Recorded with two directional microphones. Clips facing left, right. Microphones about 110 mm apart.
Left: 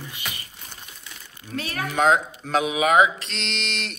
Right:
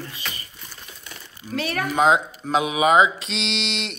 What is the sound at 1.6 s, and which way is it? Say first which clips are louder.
Speech: right 4 dB; 70° right (ahead or behind).